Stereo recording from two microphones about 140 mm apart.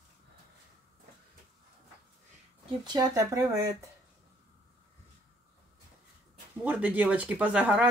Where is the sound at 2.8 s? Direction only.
25° right (ahead or behind).